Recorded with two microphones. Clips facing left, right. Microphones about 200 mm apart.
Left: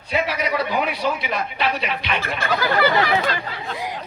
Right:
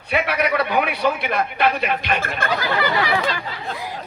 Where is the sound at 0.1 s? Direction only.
60° right (ahead or behind).